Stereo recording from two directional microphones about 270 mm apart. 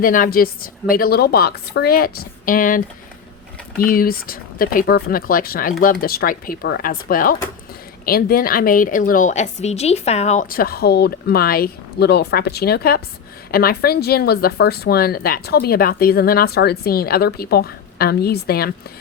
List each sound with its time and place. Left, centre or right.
0.0 s speech: left